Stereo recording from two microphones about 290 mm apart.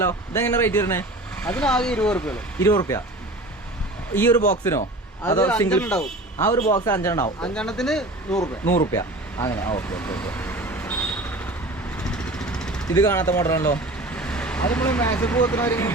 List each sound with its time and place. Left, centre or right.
0.0 s speech: centre
4.1 s speech: centre
6.6 s a man's voice: left
6.8 s speech: centre
8.4 s vehicle: centre